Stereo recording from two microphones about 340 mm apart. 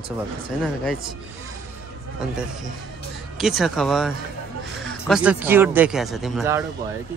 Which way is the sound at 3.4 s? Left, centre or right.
Centre.